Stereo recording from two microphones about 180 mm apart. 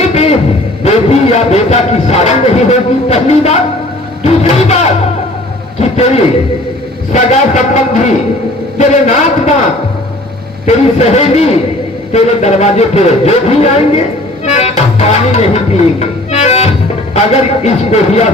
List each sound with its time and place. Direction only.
0.1 s a sound: 35° left (ahead or behind)
0.9 s a man's voice: 35° left (ahead or behind)
10.7 s speech: 35° left (ahead or behind)
14.4 s music: 35° left (ahead or behind)
17.2 s speech: 35° left (ahead or behind)